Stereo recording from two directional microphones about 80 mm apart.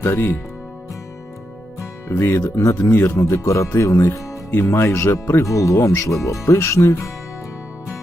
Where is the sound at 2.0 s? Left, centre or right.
Left.